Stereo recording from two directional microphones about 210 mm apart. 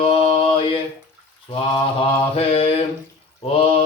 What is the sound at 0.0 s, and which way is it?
Mantra, 25° left (ahead or behind).